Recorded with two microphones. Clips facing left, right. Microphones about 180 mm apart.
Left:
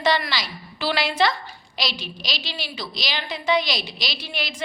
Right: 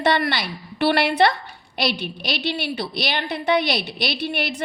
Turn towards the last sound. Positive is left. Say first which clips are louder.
# right 7 dB
turn(degrees=-60)  # may be behind; listen again after turning